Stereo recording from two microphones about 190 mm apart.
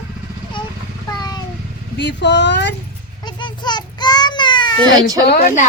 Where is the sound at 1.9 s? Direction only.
65° left (ahead or behind).